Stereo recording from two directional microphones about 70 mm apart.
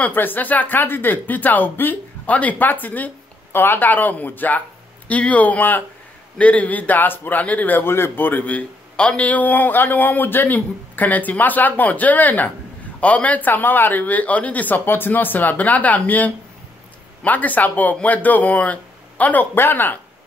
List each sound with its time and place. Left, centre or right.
0.0 s a man's voice: left